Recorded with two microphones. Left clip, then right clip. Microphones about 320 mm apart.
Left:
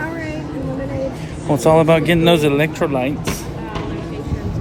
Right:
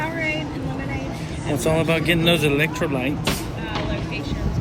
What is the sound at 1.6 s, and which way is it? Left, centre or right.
Speech, centre.